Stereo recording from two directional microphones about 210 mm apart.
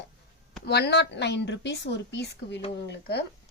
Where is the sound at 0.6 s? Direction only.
50° left (ahead or behind).